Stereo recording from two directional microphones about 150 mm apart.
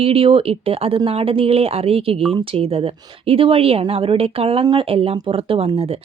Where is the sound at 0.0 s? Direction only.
40° right (ahead or behind).